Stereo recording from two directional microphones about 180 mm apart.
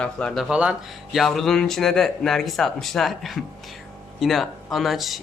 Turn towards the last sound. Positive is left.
turn(degrees=0)  # may be behind; listen again after turning